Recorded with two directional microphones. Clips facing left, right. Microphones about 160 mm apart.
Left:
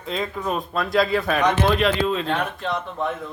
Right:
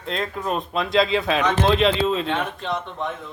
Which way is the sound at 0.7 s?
20° right (ahead or behind).